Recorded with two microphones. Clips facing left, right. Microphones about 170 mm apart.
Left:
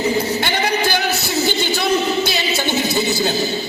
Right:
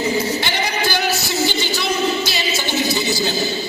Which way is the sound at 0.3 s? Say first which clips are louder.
Left 3 dB; 55° left (ahead or behind).